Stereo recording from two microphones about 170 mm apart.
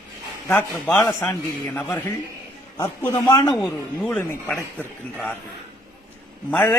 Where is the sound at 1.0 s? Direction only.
15° left (ahead or behind).